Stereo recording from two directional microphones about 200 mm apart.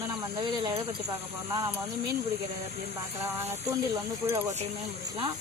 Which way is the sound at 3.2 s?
10° right (ahead or behind).